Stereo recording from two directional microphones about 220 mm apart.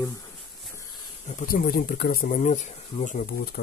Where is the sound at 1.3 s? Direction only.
40° left (ahead or behind).